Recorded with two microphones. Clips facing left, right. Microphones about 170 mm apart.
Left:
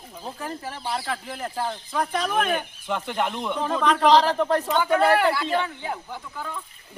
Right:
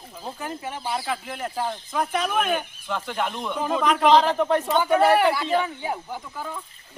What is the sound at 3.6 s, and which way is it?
Speech, 5° right (ahead or behind).